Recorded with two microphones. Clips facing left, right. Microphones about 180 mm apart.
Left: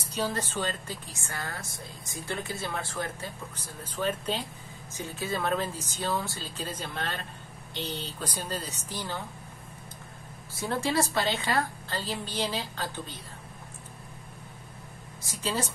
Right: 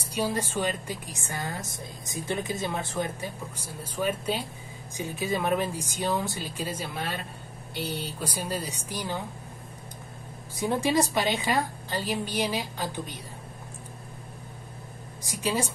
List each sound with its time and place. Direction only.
0.1 s a woman's voice: 10° right (ahead or behind)
10.5 s a woman's voice: 15° right (ahead or behind)
15.2 s a woman's voice: 10° right (ahead or behind)